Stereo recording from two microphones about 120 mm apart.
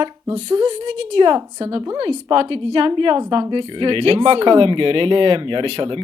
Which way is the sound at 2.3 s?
45° right (ahead or behind).